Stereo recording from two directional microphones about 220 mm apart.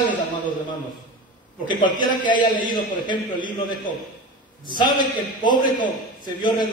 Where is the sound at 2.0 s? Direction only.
20° left (ahead or behind).